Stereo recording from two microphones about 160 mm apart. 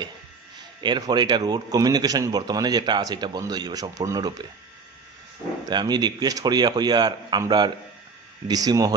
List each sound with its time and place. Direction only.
0.7 s a man's voice: 30° right (ahead or behind)
5.7 s a man's voice: 25° right (ahead or behind)